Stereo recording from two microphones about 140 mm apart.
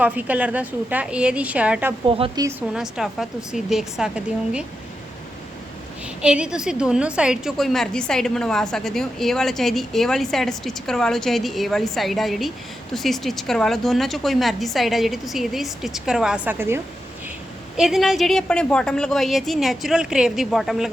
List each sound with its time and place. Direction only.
0.0 s a woman's voice: 10° right (ahead or behind)
2.0 s a woman's voice: 40° right (ahead or behind)
2.3 s a woman's voice: 25° right (ahead or behind)
2.6 s a woman's voice: 5° right (ahead or behind)
6.2 s a woman's voice: 5° right (ahead or behind)
17.7 s a woman's voice: centre (ahead or behind)